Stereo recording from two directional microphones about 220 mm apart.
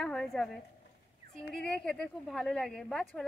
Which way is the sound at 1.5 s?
5° left (ahead or behind).